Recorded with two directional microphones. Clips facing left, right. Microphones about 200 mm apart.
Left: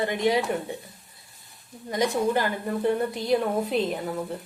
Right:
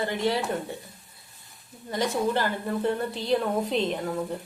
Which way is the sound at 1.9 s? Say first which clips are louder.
Left 2 dB; 15° left (ahead or behind).